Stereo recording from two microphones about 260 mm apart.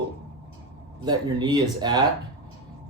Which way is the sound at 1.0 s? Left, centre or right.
Centre.